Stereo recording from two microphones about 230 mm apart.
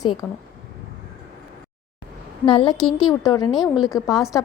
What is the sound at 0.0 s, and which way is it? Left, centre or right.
Speech, centre.